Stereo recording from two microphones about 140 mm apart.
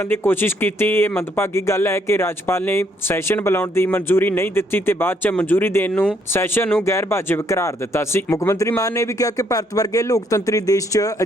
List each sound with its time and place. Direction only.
0.0 s speech: 15° left (ahead or behind)